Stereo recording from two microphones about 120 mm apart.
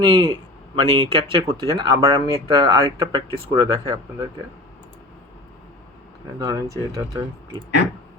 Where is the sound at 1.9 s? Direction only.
30° right (ahead or behind).